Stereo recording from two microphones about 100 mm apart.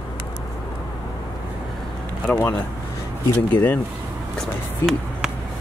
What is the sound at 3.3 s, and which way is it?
Speech, 15° left (ahead or behind).